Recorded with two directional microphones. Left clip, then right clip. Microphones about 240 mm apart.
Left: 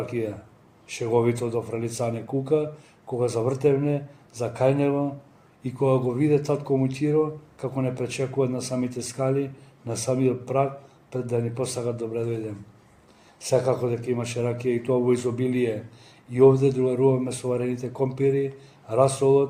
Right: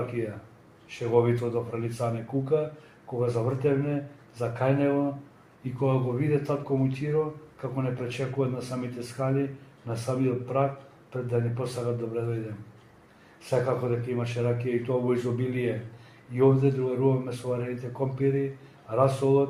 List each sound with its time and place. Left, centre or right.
0.2 s speech: left
13.5 s speech: left